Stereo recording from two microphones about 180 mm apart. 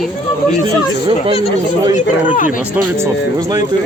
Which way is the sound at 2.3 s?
50° left (ahead or behind).